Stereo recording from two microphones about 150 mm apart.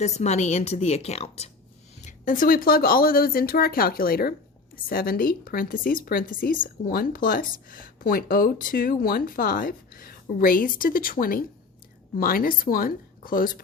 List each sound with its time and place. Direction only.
0.0 s a woman's voice: 50° left (ahead or behind)
2.0 s speech: 60° left (ahead or behind); by 4.4 s 85° left
4.9 s speech: 75° left (ahead or behind)